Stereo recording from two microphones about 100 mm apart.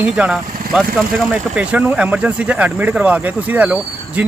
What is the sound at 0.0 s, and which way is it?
Speech, 10° right (ahead or behind).